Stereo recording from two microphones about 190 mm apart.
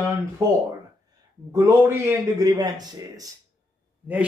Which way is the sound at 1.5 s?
15° right (ahead or behind).